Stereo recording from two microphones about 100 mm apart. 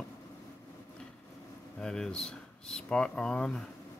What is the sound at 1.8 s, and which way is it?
Speech, 5° left (ahead or behind).